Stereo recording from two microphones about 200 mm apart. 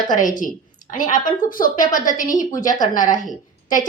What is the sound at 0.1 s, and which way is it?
A woman's voice, 40° left (ahead or behind).